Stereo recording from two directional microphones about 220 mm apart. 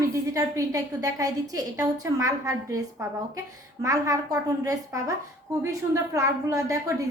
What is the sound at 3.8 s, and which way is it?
A woman's voice, 15° right (ahead or behind).